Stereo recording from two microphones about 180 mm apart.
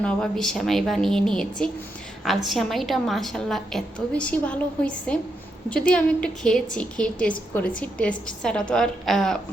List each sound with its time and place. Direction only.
0.0 s a woman's voice: 5° left (ahead or behind)